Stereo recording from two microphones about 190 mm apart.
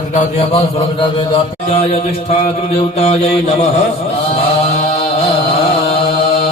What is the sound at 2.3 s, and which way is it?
A man's voice, 30° left (ahead or behind).